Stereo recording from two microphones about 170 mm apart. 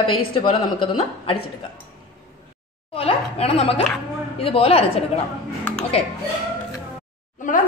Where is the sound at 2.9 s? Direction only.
35° left (ahead or behind).